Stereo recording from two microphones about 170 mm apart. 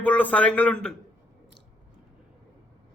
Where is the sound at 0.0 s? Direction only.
10° left (ahead or behind).